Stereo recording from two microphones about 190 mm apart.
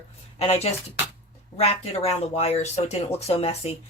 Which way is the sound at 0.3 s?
35° left (ahead or behind).